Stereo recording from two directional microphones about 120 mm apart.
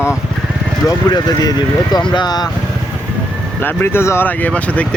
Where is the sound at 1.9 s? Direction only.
35° left (ahead or behind).